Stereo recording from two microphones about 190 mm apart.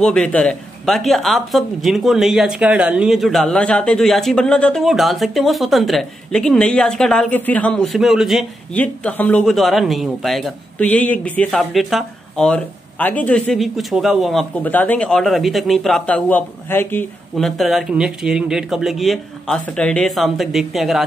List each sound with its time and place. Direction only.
0.0 s speech: 5° left (ahead or behind)
8.8 s speech: 10° left (ahead or behind)